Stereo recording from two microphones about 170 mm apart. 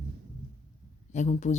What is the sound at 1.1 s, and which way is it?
Speech, 45° left (ahead or behind).